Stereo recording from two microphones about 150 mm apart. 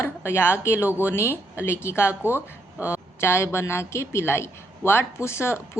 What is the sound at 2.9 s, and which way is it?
Speech, 15° left (ahead or behind).